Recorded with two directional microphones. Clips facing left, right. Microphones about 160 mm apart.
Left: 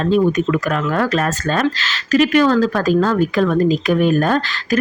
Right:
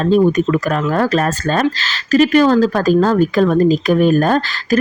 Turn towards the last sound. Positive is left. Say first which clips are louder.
# right 3 dB
turn(degrees=-40)  # may be behind; listen again after turning